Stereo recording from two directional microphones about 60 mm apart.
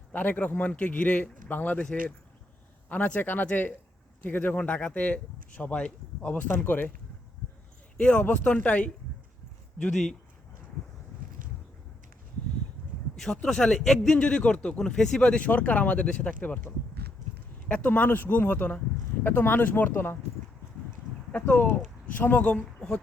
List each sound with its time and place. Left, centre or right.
0.1 s speech: left
7.9 s speech: left
9.8 s speech: centre
13.1 s speech: centre; by 20.1 s left
21.4 s speech: left